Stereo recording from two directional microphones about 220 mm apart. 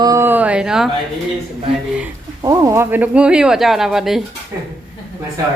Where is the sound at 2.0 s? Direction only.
15° right (ahead or behind).